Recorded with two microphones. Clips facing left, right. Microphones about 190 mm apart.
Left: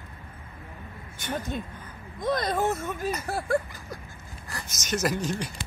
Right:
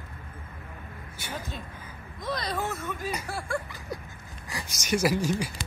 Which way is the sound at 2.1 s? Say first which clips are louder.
Left 5 dB; 50° left (ahead or behind).